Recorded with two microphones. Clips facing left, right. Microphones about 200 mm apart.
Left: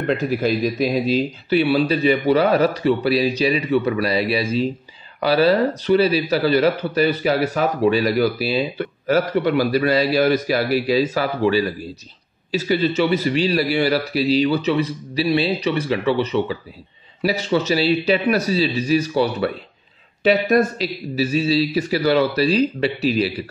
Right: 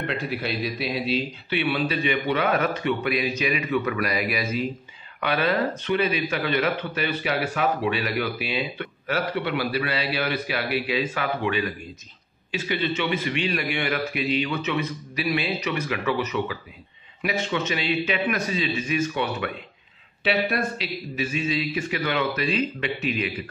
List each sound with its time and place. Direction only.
0.0 s speech: 45° left (ahead or behind)